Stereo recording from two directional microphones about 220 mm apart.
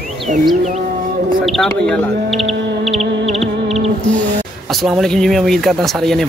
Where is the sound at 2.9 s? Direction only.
30° right (ahead or behind).